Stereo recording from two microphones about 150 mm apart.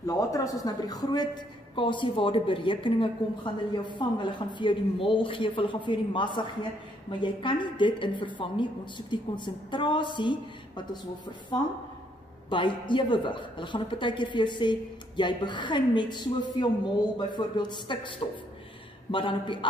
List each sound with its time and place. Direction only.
0.0 s a woman's voice: 20° left (ahead or behind)
12.4 s a woman's voice: 30° left (ahead or behind)
19.1 s a woman's voice: 35° left (ahead or behind)